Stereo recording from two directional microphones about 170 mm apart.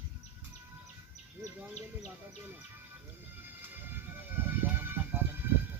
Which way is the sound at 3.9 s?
10° right (ahead or behind).